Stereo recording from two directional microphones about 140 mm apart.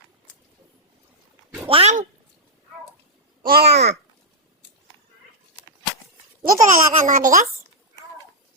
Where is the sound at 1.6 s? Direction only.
45° right (ahead or behind).